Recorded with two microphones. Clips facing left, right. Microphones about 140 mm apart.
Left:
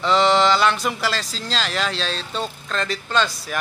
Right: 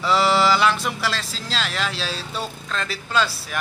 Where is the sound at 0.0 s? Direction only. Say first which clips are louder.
Left 2 dB; 5° right (ahead or behind).